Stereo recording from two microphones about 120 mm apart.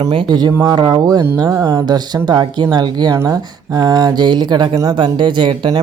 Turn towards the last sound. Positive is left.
turn(degrees=-40)  # may be behind; listen again after turning